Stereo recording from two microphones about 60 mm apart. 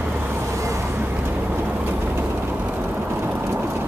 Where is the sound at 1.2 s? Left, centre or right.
Right.